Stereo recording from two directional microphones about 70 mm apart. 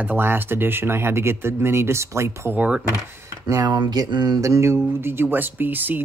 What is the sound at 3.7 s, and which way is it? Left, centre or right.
Speech, right.